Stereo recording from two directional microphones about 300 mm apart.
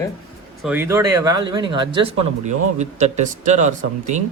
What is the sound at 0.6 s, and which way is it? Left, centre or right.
Speech, centre.